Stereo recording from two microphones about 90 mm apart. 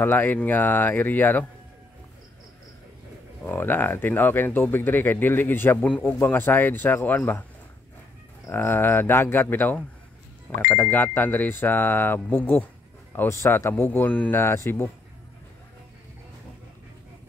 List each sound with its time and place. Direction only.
0.0 s speech: 20° left (ahead or behind)
3.4 s speech: 20° left (ahead or behind)
8.5 s speech: 25° left (ahead or behind)